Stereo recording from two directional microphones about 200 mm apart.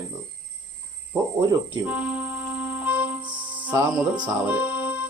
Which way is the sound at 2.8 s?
5° right (ahead or behind).